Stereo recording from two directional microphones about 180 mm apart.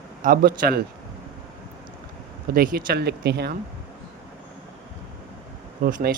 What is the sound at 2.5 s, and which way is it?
Speech, 55° right (ahead or behind).